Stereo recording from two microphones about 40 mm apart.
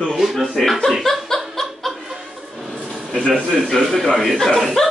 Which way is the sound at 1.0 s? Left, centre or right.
Centre.